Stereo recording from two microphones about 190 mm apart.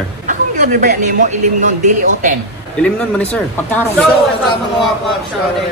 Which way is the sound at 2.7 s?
5° left (ahead or behind).